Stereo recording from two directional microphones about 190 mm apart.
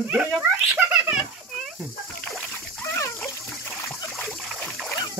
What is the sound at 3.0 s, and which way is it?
Water, 15° left (ahead or behind).